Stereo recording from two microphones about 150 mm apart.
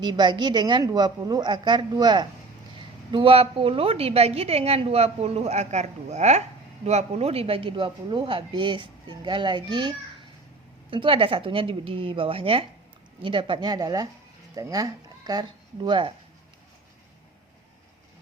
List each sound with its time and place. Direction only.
0.0 s a woman's voice: 30° right (ahead or behind)
10.9 s a woman's voice: 35° right (ahead or behind)